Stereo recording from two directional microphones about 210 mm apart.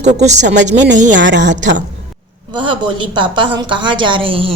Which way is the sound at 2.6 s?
25° right (ahead or behind).